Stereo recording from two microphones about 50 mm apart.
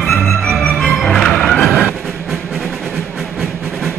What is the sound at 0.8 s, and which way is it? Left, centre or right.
Music, centre.